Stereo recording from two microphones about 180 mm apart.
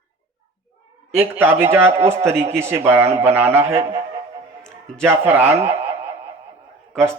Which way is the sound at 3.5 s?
35° right (ahead or behind).